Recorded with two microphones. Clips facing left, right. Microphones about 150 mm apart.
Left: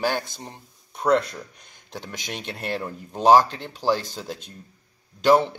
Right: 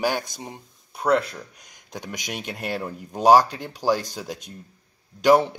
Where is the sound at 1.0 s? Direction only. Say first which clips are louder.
Left 1 dB; centre (ahead or behind).